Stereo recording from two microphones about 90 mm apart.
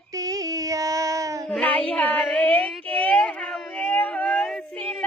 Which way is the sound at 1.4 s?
10° left (ahead or behind).